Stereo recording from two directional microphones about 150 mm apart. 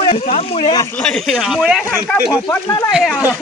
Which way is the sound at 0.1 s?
45° left (ahead or behind).